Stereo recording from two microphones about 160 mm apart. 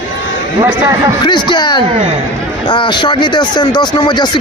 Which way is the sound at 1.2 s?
30° left (ahead or behind).